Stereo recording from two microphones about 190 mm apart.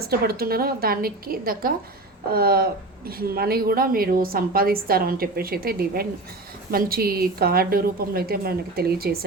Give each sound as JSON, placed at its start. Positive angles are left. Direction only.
{"t": 0.0, "sound": "a woman's voice", "side_deg": -55}